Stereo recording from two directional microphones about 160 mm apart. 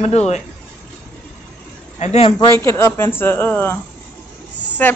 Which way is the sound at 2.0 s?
45° left (ahead or behind).